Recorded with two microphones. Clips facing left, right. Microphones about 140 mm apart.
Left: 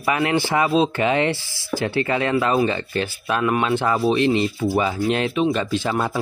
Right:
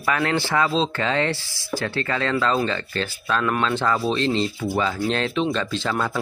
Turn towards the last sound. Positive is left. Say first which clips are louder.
# left 2 dB
turn(degrees=20)  # may be behind; listen again after turning